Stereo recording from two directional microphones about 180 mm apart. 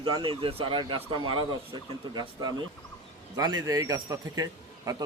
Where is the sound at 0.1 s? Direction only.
25° right (ahead or behind).